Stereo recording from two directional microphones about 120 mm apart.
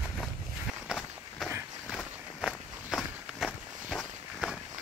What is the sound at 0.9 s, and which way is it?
Walk, centre (ahead or behind).